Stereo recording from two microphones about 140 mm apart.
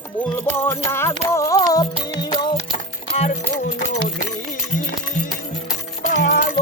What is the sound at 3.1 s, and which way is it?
Music, 55° left (ahead or behind).